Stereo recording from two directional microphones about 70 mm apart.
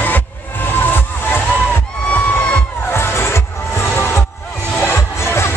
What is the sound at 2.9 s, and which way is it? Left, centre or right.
Music, left.